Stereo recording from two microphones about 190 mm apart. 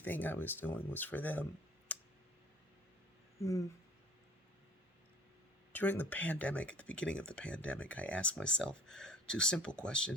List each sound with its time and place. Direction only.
0.0 s speech: 10° left (ahead or behind)
1.9 s clicking: 10° left (ahead or behind)
3.4 s speech: 15° left (ahead or behind)
5.7 s speech: 10° left (ahead or behind)